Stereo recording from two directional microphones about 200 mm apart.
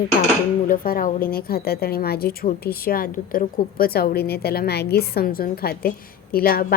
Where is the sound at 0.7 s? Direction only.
45° left (ahead or behind).